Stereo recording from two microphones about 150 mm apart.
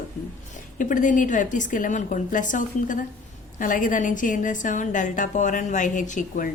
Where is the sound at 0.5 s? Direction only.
60° left (ahead or behind).